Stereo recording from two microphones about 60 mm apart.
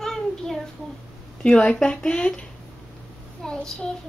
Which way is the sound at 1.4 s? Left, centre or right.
Centre.